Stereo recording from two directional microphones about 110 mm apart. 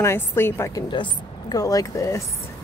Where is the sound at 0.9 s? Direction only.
40° left (ahead or behind).